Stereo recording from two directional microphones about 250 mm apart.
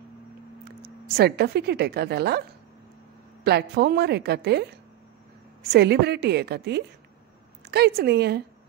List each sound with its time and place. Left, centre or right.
0.8 s speech: right
3.4 s speech: right